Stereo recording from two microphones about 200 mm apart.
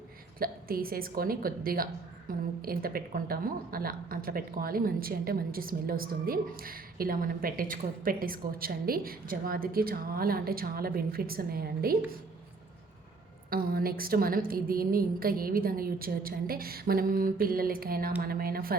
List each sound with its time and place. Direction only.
0.3 s a woman's voice: 45° right (ahead or behind)
13.5 s a woman's voice: 45° right (ahead or behind)